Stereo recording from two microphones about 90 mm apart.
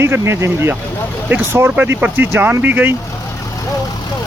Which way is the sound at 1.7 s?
15° right (ahead or behind).